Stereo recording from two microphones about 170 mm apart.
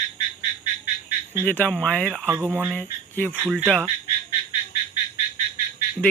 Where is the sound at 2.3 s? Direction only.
10° right (ahead or behind).